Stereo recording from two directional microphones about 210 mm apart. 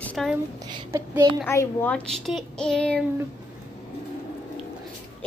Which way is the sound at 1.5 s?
10° left (ahead or behind).